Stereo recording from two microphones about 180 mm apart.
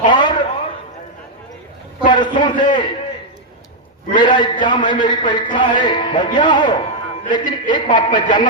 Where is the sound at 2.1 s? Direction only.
25° left (ahead or behind).